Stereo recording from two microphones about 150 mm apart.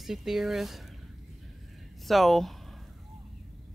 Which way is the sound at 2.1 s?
Centre (ahead or behind).